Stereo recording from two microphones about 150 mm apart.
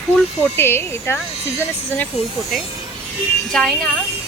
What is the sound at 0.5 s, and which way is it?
Speech, 15° left (ahead or behind).